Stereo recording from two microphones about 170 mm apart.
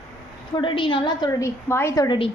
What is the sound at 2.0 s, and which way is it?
Speech, 30° left (ahead or behind).